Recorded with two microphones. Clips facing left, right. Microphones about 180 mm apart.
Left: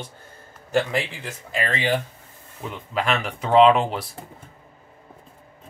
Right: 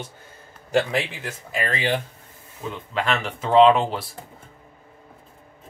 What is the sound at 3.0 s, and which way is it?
Speech, 5° left (ahead or behind).